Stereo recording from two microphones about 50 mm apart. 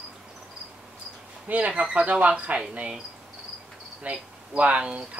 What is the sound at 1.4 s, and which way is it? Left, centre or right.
Speech, right.